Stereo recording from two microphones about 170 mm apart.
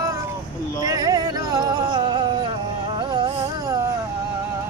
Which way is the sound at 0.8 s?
20° right (ahead or behind).